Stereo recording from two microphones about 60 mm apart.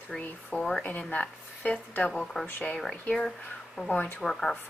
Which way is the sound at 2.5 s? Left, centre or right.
Left.